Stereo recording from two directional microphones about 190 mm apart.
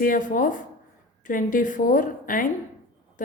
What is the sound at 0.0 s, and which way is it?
A woman's voice, 45° left (ahead or behind).